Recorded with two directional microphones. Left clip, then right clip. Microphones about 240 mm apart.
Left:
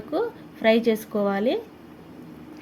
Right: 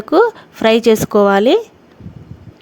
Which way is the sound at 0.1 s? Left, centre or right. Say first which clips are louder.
Right 15 dB; right.